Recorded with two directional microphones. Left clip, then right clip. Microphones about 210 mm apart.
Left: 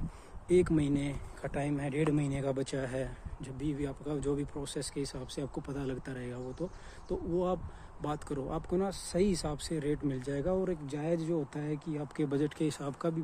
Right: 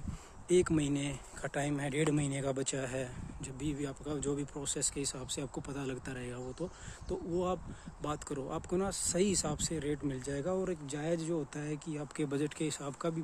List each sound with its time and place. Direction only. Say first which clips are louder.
0.5 s speech: left 2 dB; 15° right (ahead or behind)
1.5 s speech: left 1 dB; 20° right (ahead or behind); by 12.9 s 5° left (ahead or behind)